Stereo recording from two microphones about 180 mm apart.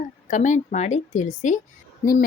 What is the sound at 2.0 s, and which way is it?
Speech, 55° left (ahead or behind).